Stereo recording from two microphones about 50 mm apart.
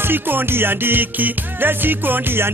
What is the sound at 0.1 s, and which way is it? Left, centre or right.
Music, right.